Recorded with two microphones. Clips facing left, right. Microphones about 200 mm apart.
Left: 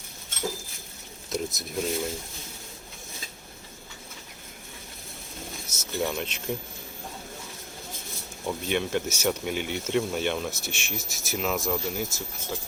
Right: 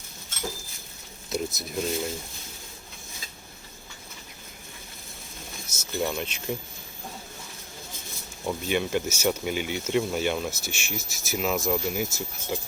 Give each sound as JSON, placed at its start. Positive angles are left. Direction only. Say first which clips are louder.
{"t": 1.3, "sound": "speech", "louder": "right 1 dB", "side_deg": 0}
{"t": 5.6, "sound": "speech", "louder": "right 1 dB", "side_deg": 0}
{"t": 8.4, "sound": "speech", "louder": "right 1 dB", "side_deg": 0}
{"t": 12.5, "sound": "speech", "louder": "right 4 dB", "side_deg": -15}